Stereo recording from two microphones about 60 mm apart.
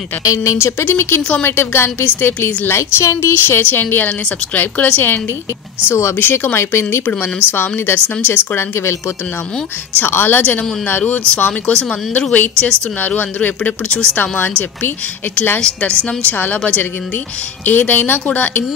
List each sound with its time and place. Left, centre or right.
0.2 s speech: left
0.6 s speech: left
3.4 s speech: left
5.9 s speech: left
6.1 s speech: left
9.9 s speech: left
15.6 s speech: left